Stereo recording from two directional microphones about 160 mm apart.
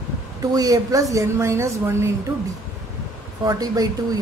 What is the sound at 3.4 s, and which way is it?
Speech, 25° right (ahead or behind).